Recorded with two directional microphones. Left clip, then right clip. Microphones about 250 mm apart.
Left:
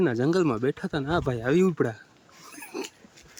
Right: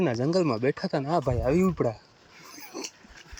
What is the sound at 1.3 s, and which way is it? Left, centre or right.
Speech, left.